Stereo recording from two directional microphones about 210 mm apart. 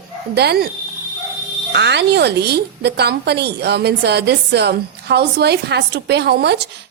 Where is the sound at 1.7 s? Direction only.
55° right (ahead or behind).